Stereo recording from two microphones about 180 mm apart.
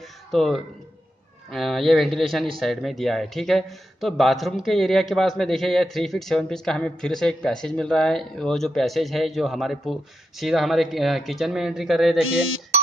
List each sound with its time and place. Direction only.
0.3 s speech: centre (ahead or behind)